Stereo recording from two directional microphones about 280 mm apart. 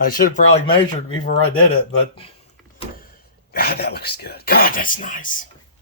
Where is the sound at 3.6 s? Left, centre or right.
Left.